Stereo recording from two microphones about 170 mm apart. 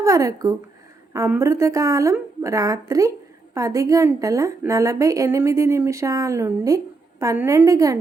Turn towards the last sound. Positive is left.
turn(degrees=-20)  # may be behind; listen again after turning